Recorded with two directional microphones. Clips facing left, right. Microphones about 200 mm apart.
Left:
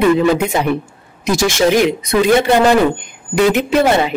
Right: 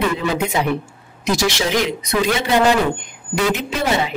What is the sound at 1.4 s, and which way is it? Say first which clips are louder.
A woman's voice: left 8 dB; 50° left (ahead or behind).